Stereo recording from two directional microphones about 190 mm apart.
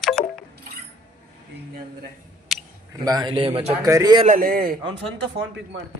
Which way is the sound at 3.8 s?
20° right (ahead or behind).